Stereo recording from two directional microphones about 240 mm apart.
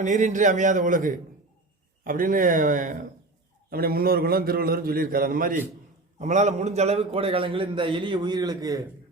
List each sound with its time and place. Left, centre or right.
0.0 s a man's voice: right; by 8.8 s centre